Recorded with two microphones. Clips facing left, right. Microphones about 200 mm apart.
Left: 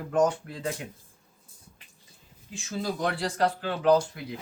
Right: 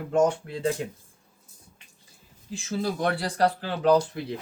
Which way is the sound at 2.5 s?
35° right (ahead or behind).